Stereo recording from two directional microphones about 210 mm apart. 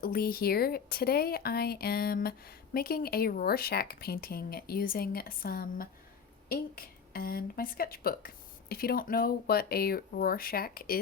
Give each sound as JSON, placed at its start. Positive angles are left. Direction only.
{"t": 0.0, "sound": "speech", "side_deg": 45}